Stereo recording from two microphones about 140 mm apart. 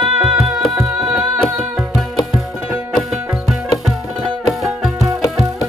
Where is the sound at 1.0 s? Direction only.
5° right (ahead or behind).